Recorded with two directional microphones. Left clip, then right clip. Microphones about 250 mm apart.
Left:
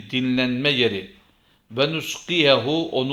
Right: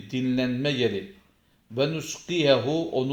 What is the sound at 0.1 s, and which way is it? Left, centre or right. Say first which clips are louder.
Speech: left 5 dB; centre.